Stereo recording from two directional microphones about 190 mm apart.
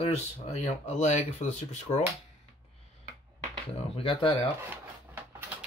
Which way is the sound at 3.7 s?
30° left (ahead or behind).